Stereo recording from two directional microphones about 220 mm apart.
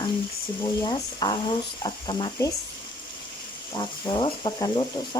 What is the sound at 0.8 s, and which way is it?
Speech, 20° left (ahead or behind).